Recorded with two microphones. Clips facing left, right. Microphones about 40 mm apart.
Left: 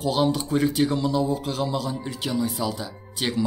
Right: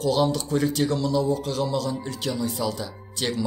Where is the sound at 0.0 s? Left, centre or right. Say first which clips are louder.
Even; centre.